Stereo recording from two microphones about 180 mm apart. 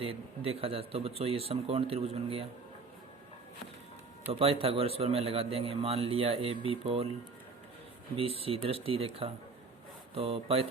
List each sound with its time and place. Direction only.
0.0 s a man's voice: 30° right (ahead or behind)
4.3 s a man's voice: 30° right (ahead or behind)
8.1 s a man's voice: 30° right (ahead or behind)